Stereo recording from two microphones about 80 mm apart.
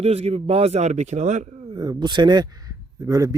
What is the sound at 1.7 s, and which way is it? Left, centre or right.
A man's voice, right.